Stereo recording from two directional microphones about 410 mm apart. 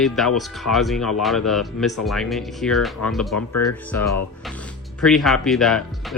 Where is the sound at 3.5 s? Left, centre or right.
Left.